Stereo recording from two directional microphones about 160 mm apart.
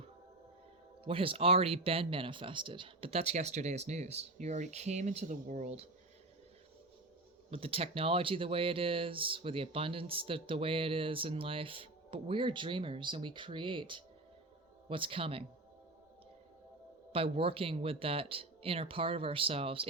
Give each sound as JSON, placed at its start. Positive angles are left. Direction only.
{"t": 1.0, "sound": "speech", "side_deg": -35}
{"t": 7.5, "sound": "speech", "side_deg": -35}
{"t": 17.1, "sound": "speech", "side_deg": -35}